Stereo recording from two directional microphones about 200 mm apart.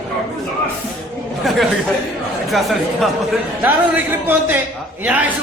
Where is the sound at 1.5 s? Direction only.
Centre (ahead or behind).